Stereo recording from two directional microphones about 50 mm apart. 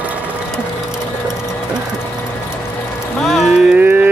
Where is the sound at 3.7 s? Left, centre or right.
Right.